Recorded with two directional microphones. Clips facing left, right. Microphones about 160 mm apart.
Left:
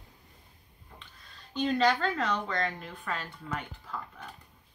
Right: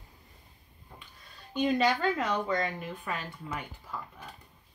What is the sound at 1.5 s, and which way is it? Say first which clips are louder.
A woman's voice: even; 10° right (ahead or behind).